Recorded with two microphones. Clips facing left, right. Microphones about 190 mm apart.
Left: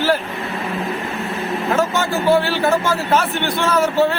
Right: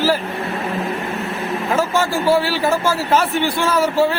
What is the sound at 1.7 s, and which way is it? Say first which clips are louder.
A man's voice: right 1 dB; 10° right (ahead or behind).